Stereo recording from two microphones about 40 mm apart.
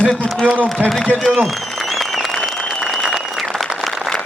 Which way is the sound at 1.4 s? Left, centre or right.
Centre.